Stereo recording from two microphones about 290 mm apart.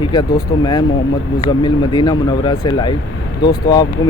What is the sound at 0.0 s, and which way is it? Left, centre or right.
Speech, centre.